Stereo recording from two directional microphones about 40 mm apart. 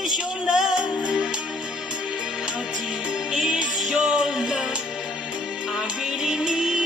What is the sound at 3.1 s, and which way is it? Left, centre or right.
Music, right.